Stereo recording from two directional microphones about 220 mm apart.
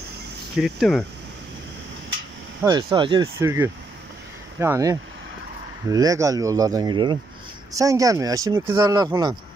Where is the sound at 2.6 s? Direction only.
15° right (ahead or behind).